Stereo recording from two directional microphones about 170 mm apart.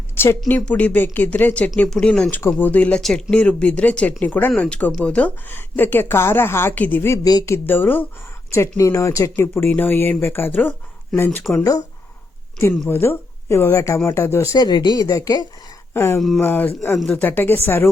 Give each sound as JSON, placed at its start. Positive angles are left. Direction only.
{"t": 0.2, "sound": "speech", "side_deg": 10}
{"t": 12.9, "sound": "speech", "side_deg": 15}